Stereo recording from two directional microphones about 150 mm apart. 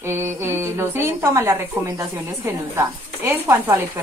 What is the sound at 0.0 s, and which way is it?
A woman's voice, 15° right (ahead or behind).